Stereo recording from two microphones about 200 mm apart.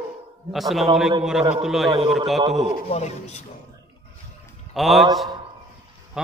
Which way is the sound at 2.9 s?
35° left (ahead or behind).